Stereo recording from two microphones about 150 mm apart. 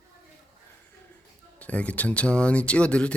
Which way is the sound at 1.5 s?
10° left (ahead or behind).